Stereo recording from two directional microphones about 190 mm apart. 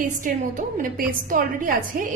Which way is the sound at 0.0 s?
45° right (ahead or behind).